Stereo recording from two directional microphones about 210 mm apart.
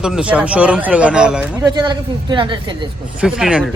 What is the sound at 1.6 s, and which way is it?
Speech, 20° right (ahead or behind).